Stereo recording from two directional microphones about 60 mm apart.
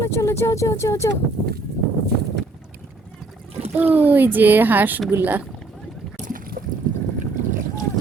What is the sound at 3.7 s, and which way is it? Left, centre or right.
Speech, right.